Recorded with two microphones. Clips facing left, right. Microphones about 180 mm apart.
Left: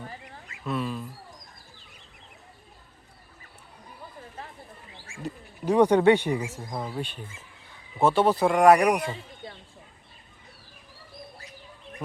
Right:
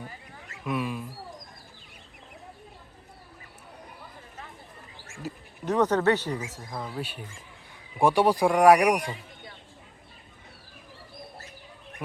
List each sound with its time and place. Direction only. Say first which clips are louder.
0.6 s speech: even; 10° right (ahead or behind)
5.6 s speech: left 4 dB; 10° left (ahead or behind)
7.0 s speech: left 1 dB; 10° right (ahead or behind)
9.0 s a sound: left 3 dB; 25° left (ahead or behind)